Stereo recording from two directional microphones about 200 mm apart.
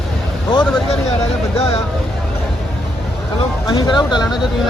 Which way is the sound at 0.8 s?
30° left (ahead or behind).